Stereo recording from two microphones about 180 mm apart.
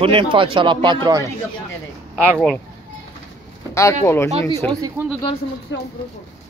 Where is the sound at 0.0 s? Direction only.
30° right (ahead or behind).